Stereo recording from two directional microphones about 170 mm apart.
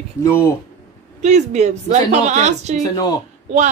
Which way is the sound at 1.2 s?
45° right (ahead or behind).